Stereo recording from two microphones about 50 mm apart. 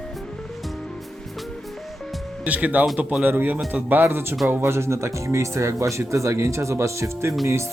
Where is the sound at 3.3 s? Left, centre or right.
Right.